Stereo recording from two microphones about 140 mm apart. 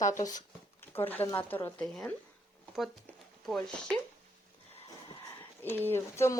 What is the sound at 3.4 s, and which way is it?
Speech, 5° left (ahead or behind).